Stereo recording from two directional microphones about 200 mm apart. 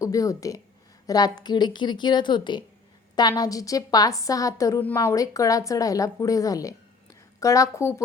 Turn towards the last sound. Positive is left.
turn(degrees=15)  # may be behind; listen again after turning